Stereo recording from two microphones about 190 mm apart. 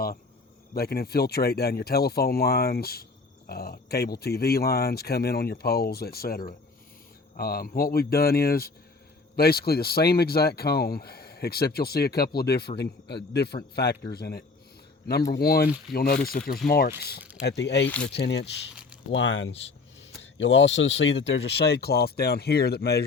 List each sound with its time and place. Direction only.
0.7 s speech: 55° left (ahead or behind)
17.8 s speech: 5° left (ahead or behind)
18.1 s speech: 65° left (ahead or behind)
19.1 s speech: 75° left (ahead or behind); by 23.0 s 55° left (ahead or behind)